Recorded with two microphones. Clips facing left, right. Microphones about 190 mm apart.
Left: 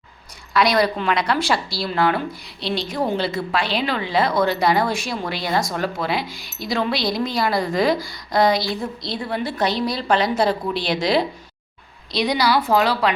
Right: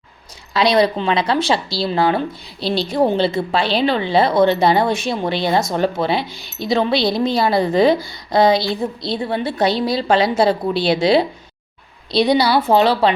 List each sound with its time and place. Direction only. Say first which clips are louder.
0.5 s speech: right 3 dB; 25° right (ahead or behind)